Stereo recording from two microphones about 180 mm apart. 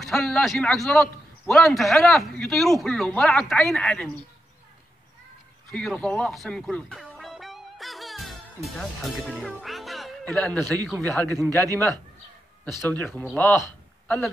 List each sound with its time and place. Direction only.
0.0 s a man's voice: centre (ahead or behind)
5.7 s music: 5° left (ahead or behind)
8.6 s speech: centre (ahead or behind)
11.2 s speech: 20° right (ahead or behind)
12.8 s a man's voice: 10° left (ahead or behind)